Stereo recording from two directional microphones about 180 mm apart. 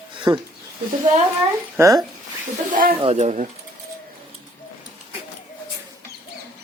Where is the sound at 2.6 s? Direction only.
50° right (ahead or behind).